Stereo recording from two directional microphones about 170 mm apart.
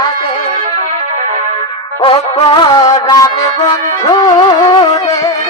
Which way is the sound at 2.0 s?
30° left (ahead or behind).